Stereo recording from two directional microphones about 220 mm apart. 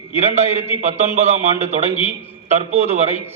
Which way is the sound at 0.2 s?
30° right (ahead or behind).